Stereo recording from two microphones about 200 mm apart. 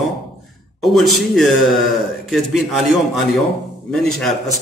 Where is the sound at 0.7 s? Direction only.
Centre (ahead or behind).